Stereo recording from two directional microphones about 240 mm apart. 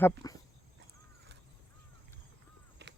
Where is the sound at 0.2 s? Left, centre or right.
Centre.